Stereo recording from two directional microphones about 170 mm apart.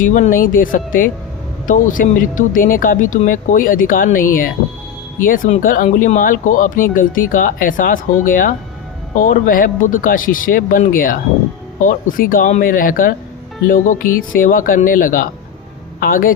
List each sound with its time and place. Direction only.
0.0 s speech: 50° left (ahead or behind)